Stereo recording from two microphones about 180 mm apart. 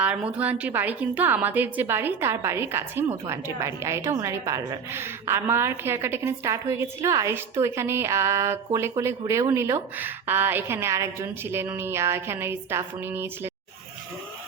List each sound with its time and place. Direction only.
0.0 s a woman's voice: 5° right (ahead or behind)